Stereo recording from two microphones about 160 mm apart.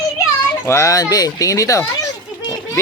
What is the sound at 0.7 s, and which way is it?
Speech, 20° left (ahead or behind).